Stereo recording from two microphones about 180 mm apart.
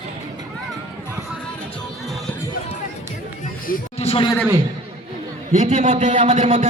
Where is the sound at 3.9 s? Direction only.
30° left (ahead or behind).